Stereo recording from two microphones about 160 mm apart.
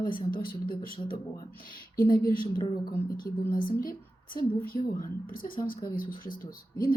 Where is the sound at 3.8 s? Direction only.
60° left (ahead or behind).